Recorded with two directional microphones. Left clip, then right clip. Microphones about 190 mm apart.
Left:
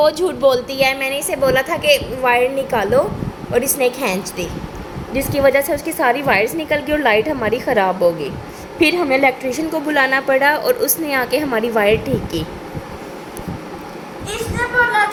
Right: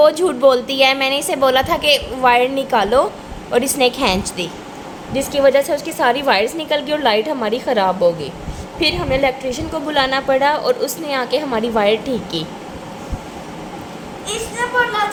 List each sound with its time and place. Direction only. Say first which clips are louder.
0.0 s a woman's voice: right 2 dB; 15° right (ahead or behind)
5.1 s a woman's voice: right 1 dB; 5° left (ahead or behind)